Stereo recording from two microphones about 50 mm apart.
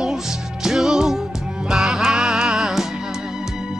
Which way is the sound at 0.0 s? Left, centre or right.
Centre.